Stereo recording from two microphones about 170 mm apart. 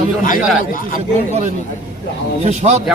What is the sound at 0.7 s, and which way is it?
Speech, 55° left (ahead or behind).